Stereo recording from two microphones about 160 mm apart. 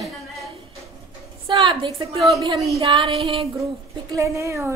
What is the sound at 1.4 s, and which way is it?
Speech, 30° right (ahead or behind).